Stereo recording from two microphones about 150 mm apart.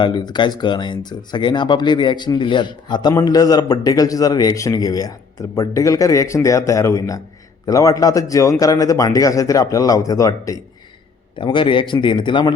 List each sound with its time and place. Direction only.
0.0 s speech: 30° left (ahead or behind)
11.3 s speech: 35° left (ahead or behind)